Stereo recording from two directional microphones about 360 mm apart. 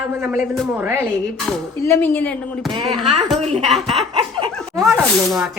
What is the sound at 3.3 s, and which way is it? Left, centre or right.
Speech, centre.